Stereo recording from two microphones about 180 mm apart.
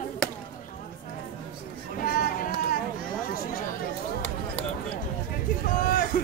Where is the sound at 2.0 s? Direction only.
50° left (ahead or behind).